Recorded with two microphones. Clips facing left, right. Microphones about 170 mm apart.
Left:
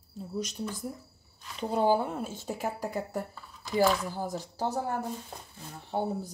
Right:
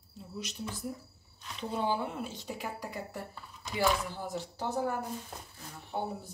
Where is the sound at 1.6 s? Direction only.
40° left (ahead or behind).